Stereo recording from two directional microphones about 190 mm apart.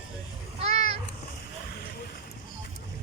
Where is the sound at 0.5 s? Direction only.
35° right (ahead or behind).